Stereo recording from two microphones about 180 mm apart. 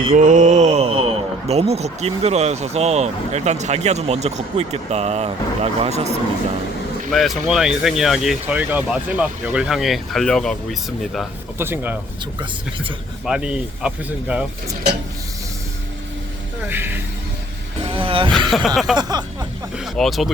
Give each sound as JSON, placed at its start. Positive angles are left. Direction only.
{"t": 0.2, "sound": "a man's voice", "side_deg": -45}
{"t": 7.1, "sound": "speech", "side_deg": 0}
{"t": 11.5, "sound": "speech", "side_deg": -10}
{"t": 12.2, "sound": "speech", "side_deg": -25}
{"t": 13.2, "sound": "speech", "side_deg": -5}
{"t": 16.6, "sound": "speech", "side_deg": -10}
{"t": 17.8, "sound": "vehicle", "side_deg": -30}
{"t": 18.3, "sound": "speech", "side_deg": 0}
{"t": 18.9, "sound": "a sound", "side_deg": -20}
{"t": 19.7, "sound": "speech", "side_deg": 0}